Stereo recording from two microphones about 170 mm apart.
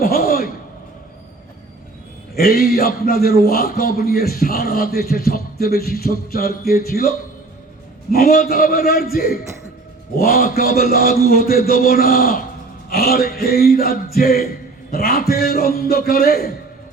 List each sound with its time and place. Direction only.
0.0 s a sound: 60° left (ahead or behind)
2.3 s a man's voice: 65° left (ahead or behind)
8.1 s a man's voice: 60° left (ahead or behind)